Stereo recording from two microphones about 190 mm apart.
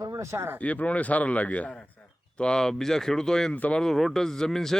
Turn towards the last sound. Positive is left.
turn(degrees=0)  # may be behind; listen again after turning